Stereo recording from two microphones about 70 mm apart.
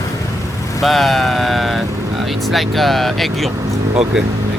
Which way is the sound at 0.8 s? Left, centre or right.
Centre.